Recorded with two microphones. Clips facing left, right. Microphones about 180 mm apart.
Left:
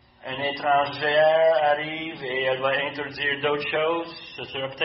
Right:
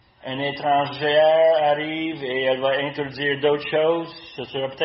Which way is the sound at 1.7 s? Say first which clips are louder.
Right 3 dB; 25° right (ahead or behind).